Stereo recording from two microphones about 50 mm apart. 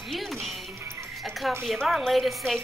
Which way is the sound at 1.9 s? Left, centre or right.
Centre.